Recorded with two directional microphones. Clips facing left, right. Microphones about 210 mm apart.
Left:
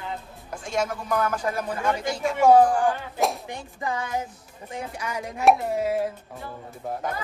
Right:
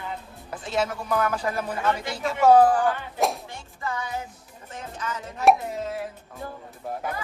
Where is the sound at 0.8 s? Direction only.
5° right (ahead or behind).